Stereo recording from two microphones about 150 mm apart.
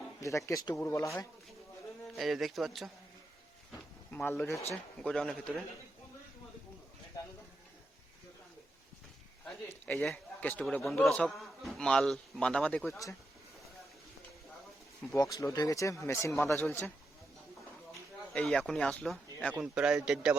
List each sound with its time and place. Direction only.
0.2 s speech: 20° left (ahead or behind)
2.1 s a man's voice: centre (ahead or behind)
4.1 s a man's voice: 15° left (ahead or behind)
9.6 s a man's voice: 10° left (ahead or behind)
12.9 s speech: 20° left (ahead or behind)
15.1 s speech: 25° left (ahead or behind)
18.3 s a man's voice: 5° left (ahead or behind)
19.5 s speech: 5° right (ahead or behind)